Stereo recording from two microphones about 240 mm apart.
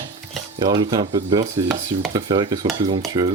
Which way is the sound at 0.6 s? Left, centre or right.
Centre.